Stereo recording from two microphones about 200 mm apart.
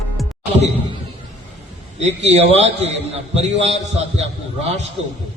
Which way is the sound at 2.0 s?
30° right (ahead or behind).